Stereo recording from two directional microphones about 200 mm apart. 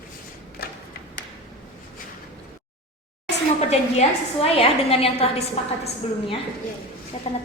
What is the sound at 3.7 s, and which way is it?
A woman's voice, 30° left (ahead or behind).